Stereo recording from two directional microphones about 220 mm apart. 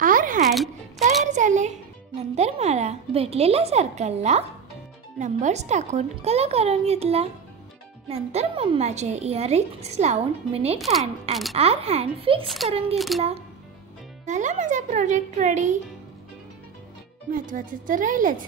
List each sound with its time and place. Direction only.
0.0 s music: 40° right (ahead or behind)
0.4 s music: centre (ahead or behind)
1.2 s a sound: 35° right (ahead or behind)
2.3 s a woman's voice: 30° right (ahead or behind)
10.8 s speech: centre (ahead or behind)
11.5 s a woman's voice: 25° right (ahead or behind)
12.9 s speech: centre (ahead or behind)
14.2 s speech: 35° right (ahead or behind)
17.3 s speech: 40° right (ahead or behind)